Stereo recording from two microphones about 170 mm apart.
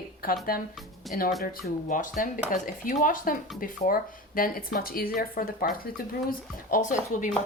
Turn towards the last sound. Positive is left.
turn(degrees=50)  # may be behind; listen again after turning